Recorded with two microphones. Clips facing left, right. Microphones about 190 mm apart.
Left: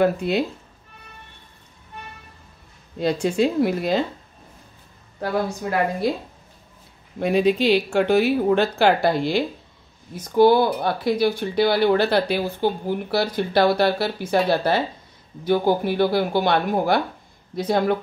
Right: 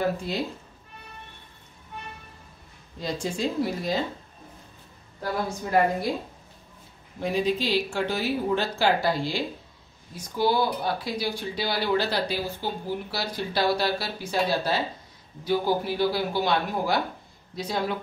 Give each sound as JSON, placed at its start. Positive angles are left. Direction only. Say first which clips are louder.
{"t": 0.0, "sound": "speech", "louder": "left 7 dB", "side_deg": 65}
{"t": 3.0, "sound": "speech", "louder": "left 9 dB", "side_deg": 65}
{"t": 7.2, "sound": "speech", "louder": "left 7 dB", "side_deg": 65}